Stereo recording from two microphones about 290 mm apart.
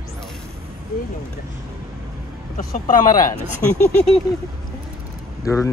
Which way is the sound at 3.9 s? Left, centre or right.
Centre.